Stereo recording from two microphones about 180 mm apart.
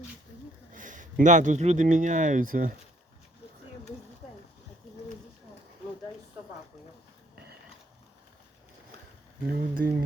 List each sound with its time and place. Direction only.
0.7 s speech: 45° right (ahead or behind)
9.5 s speech: 50° right (ahead or behind)